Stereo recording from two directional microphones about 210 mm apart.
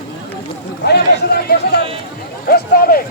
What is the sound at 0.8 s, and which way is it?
A man's voice, 50° left (ahead or behind).